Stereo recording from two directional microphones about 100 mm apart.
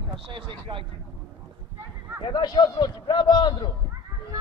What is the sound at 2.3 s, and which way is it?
A man's voice, 45° left (ahead or behind).